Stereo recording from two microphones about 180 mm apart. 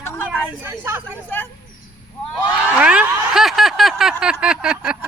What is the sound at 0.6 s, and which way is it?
Speech, 10° right (ahead or behind).